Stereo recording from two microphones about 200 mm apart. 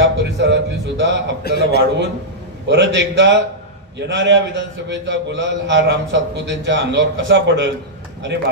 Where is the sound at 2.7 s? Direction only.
65° right (ahead or behind).